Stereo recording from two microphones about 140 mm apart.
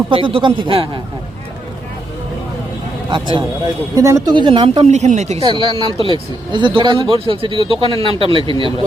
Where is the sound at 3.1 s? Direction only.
35° right (ahead or behind).